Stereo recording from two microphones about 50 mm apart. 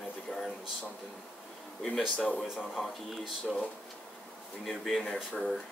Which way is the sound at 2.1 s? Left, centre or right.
Left.